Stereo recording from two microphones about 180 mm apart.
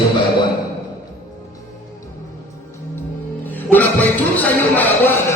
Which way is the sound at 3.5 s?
10° left (ahead or behind).